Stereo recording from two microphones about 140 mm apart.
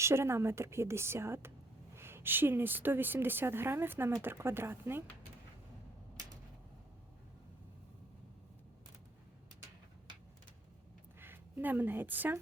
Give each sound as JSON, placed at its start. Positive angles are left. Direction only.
{"t": 0.0, "sound": "a woman's voice", "side_deg": -20}
{"t": 11.2, "sound": "a woman's voice", "side_deg": -15}